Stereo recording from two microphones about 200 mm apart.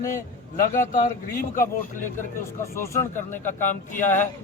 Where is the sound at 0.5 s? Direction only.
45° left (ahead or behind).